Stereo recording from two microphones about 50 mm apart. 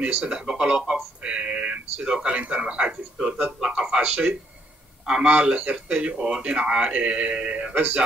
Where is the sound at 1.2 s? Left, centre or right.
Right.